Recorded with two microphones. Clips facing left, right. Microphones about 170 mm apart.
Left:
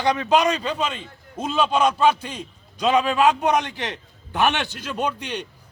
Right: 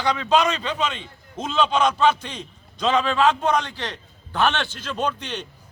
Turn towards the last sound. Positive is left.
turn(degrees=10)  # may be behind; listen again after turning